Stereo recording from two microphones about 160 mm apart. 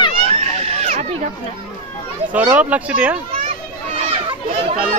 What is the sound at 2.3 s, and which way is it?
Speech, 10° right (ahead or behind).